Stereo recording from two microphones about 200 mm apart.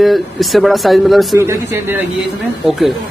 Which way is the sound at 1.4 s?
15° right (ahead or behind).